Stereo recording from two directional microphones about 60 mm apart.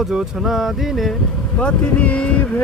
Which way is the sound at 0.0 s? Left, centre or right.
Centre.